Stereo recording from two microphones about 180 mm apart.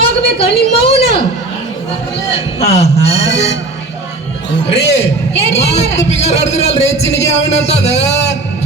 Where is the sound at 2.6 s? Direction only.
35° left (ahead or behind).